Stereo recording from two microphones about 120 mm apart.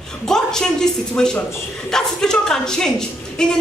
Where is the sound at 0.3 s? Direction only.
5° left (ahead or behind).